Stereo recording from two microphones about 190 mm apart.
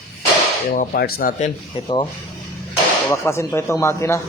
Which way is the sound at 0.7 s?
50° left (ahead or behind).